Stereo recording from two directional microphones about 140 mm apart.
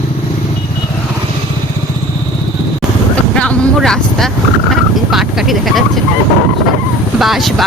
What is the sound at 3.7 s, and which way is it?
Vehicle, 5° left (ahead or behind).